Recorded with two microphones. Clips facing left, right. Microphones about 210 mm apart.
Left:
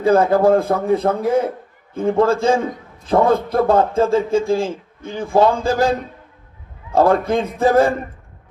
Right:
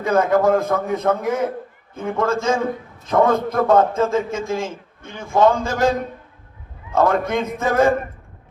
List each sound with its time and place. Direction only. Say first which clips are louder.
0.0 s a man's voice: left 3 dB; 30° left (ahead or behind)
6.9 s a man's voice: left 3 dB; 30° left (ahead or behind)